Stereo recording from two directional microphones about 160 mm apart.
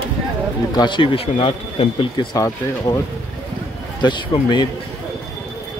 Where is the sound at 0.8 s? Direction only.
30° left (ahead or behind).